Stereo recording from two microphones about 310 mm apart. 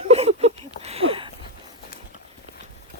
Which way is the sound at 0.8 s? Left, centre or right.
Centre.